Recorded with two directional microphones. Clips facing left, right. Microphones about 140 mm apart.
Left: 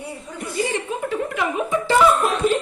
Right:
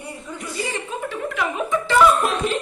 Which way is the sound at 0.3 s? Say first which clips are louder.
Left 5 dB; 55° left (ahead or behind).